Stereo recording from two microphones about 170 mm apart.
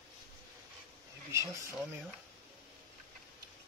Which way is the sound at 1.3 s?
15° right (ahead or behind).